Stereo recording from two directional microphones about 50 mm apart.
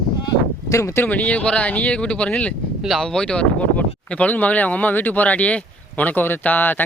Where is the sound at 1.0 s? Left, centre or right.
Left.